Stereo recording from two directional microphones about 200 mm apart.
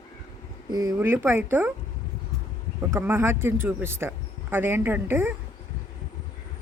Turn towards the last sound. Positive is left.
turn(degrees=-10)  # may be behind; listen again after turning